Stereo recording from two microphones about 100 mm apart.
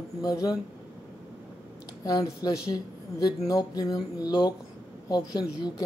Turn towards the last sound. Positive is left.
turn(degrees=40)  # may be behind; listen again after turning